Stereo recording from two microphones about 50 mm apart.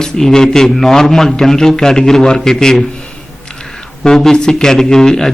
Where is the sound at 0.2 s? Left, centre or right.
Centre.